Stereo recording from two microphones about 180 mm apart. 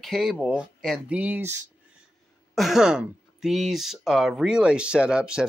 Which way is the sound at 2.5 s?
Centre (ahead or behind).